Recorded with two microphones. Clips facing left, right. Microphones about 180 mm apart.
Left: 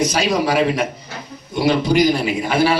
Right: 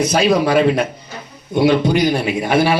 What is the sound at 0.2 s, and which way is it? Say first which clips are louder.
Speech: right 7 dB; 60° right (ahead or behind).